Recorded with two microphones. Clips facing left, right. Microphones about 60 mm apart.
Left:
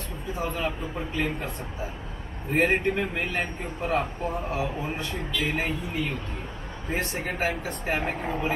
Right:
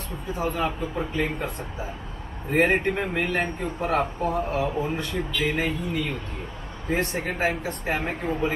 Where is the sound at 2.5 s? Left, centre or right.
Right.